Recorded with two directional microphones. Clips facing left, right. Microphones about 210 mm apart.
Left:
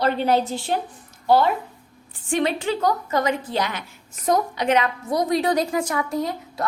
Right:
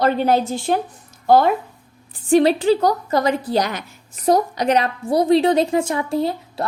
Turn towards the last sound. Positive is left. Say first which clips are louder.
# right 4 dB
turn(degrees=-30)  # may be behind; listen again after turning